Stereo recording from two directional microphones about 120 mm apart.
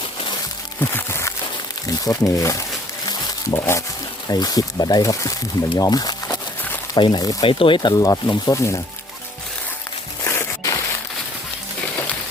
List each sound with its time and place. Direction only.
0.8 s music: 20° left (ahead or behind)
2.0 s speech: 25° left (ahead or behind)
3.1 s music: 35° left (ahead or behind)
3.6 s speech: 25° left (ahead or behind)
7.4 s speech: 45° left (ahead or behind); by 8.8 s 25° left (ahead or behind)
10.2 s a sound: 25° left (ahead or behind)